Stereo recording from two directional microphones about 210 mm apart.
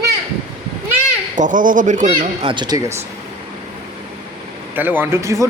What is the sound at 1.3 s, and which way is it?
Speech, 35° right (ahead or behind).